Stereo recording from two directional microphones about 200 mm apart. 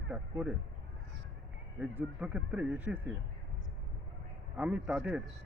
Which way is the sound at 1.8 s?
5° right (ahead or behind).